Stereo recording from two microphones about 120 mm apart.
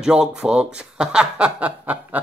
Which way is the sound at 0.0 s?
5° right (ahead or behind).